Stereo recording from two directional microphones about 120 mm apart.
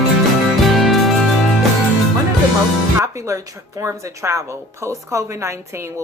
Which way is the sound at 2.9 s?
25° right (ahead or behind).